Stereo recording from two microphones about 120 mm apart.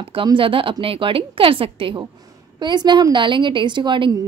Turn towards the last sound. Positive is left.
turn(degrees=-40)  # may be behind; listen again after turning